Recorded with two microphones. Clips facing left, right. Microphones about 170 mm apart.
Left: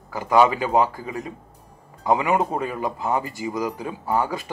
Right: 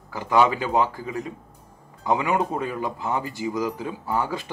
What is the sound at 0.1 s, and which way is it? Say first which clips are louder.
Speech: left 2 dB; 15° left (ahead or behind).